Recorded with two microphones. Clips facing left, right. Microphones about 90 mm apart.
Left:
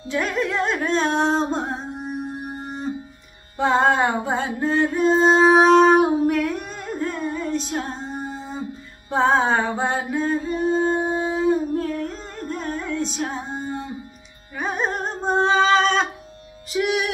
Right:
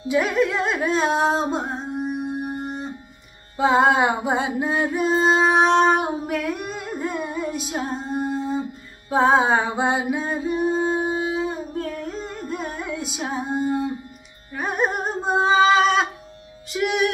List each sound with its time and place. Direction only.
0.1 s singing: 5° right (ahead or behind)
3.5 s music: 5° right (ahead or behind)
14.6 s a sound: 5° right (ahead or behind)
16.7 s music: centre (ahead or behind)